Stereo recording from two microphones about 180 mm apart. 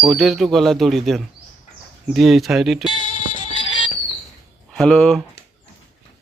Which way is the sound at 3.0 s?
45° left (ahead or behind).